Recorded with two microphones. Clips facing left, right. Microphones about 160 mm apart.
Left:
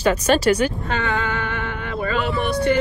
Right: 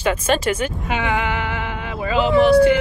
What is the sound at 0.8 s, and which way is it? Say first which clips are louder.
Speech: right 2 dB; 10° right (ahead or behind).